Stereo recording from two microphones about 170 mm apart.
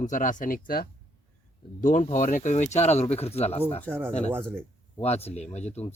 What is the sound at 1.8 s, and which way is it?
Speech, 45° left (ahead or behind).